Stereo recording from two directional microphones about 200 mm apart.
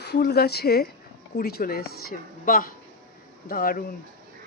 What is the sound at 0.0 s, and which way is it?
A woman's voice, 55° left (ahead or behind).